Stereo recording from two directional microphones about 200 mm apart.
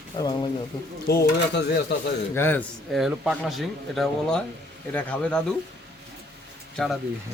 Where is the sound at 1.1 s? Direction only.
50° left (ahead or behind).